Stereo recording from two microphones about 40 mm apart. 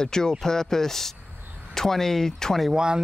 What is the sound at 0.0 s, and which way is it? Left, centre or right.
Speech, centre.